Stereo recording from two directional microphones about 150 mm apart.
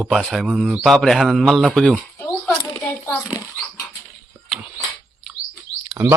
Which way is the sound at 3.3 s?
15° left (ahead or behind).